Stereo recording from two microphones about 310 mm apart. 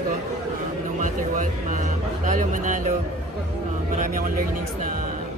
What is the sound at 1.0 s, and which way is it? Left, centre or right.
Speech, right.